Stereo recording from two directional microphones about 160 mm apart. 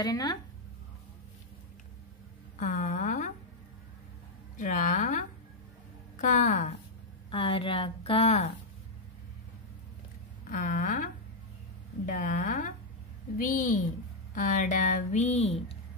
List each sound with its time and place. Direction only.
0.0 s speech: 25° left (ahead or behind)
2.5 s a sound: 50° left (ahead or behind)
4.6 s speech: 55° left (ahead or behind)
7.2 s a woman's voice: 35° left (ahead or behind)
10.5 s a woman's voice: 55° left (ahead or behind)
12.1 s a woman's voice: 55° left (ahead or behind)